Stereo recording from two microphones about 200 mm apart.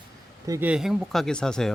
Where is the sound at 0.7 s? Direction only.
Centre (ahead or behind).